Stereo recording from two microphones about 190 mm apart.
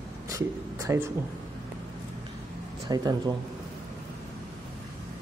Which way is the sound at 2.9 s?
20° right (ahead or behind).